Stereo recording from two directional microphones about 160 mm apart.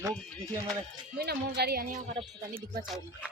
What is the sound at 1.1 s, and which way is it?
Speech, 85° right.